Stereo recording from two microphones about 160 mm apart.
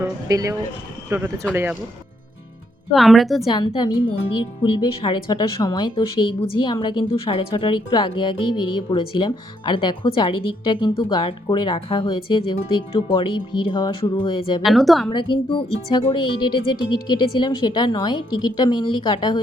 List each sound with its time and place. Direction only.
0.3 s speech: 20° right (ahead or behind)
2.9 s a woman's voice: centre (ahead or behind)
3.5 s speech: 25° left (ahead or behind)
14.6 s a woman's voice: centre (ahead or behind)
15.1 s speech: 30° left (ahead or behind)